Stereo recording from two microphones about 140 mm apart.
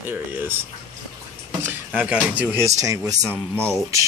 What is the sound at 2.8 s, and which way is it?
Speech, 25° right (ahead or behind).